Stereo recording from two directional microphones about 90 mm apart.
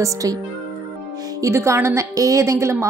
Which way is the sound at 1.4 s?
30° right (ahead or behind).